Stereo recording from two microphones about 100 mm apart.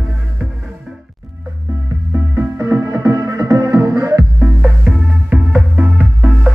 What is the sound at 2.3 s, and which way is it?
Music, 30° right (ahead or behind).